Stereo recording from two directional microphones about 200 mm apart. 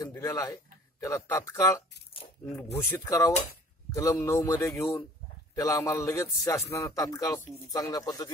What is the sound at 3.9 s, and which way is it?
A man's voice, 15° left (ahead or behind).